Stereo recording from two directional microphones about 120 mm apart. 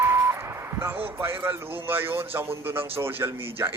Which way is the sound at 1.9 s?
20° right (ahead or behind).